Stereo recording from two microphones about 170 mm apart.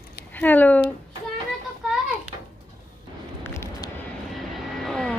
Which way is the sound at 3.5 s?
15° left (ahead or behind).